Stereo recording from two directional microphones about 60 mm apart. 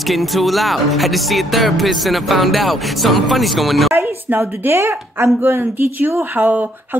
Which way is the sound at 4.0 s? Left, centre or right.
Right.